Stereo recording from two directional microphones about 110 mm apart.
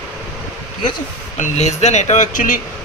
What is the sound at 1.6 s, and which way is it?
Speech, 90° left.